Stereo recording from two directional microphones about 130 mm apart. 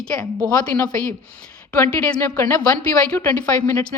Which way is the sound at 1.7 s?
15° left (ahead or behind).